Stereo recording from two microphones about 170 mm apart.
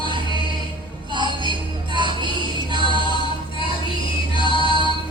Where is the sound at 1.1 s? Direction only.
25° right (ahead or behind).